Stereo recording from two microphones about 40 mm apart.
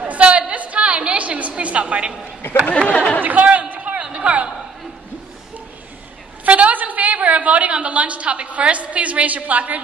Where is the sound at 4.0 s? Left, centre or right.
Right.